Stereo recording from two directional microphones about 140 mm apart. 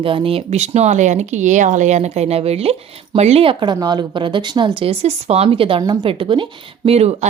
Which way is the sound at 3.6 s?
30° right (ahead or behind).